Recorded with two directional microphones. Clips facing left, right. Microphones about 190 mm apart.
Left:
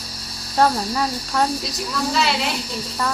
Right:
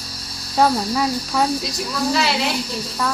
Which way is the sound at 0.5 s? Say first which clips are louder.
Right 1 dB; 5° right (ahead or behind).